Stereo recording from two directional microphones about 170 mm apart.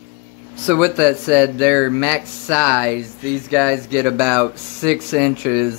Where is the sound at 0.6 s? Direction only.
10° right (ahead or behind).